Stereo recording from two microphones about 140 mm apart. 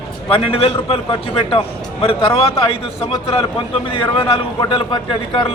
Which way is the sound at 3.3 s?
45° left (ahead or behind).